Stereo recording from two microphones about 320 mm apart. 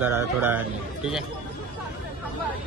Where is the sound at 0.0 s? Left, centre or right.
Centre.